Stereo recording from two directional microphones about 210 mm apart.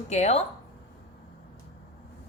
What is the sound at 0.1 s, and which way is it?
Speech, 30° left (ahead or behind).